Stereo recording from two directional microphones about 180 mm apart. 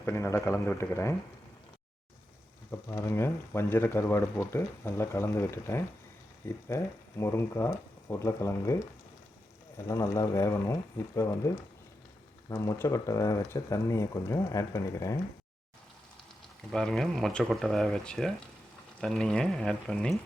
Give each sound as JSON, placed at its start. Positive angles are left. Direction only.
{"t": 0.0, "sound": "speech", "side_deg": 15}
{"t": 2.9, "sound": "speech", "side_deg": 15}
{"t": 16.7, "sound": "speech", "side_deg": 5}